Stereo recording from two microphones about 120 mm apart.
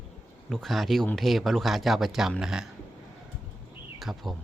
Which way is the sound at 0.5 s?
Centre (ahead or behind).